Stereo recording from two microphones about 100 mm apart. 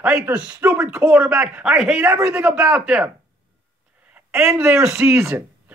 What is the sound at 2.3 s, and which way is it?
Speech, 10° right (ahead or behind).